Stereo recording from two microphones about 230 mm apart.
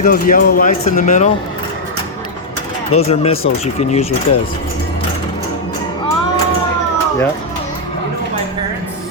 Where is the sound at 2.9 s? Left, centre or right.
Left.